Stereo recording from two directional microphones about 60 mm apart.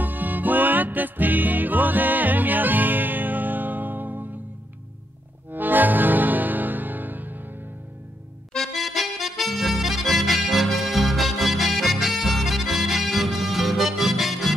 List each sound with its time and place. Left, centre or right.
0.0 s music: right
5.5 s music: right
8.5 s accordion: centre